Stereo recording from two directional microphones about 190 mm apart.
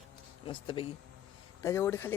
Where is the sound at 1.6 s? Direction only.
15° left (ahead or behind).